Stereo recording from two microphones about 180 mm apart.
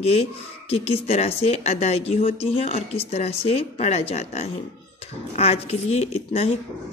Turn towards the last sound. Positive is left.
turn(degrees=35)  # may be behind; listen again after turning